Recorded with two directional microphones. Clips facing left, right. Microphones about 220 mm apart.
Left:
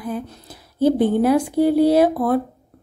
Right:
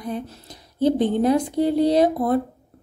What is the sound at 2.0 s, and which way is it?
Speech, 20° right (ahead or behind).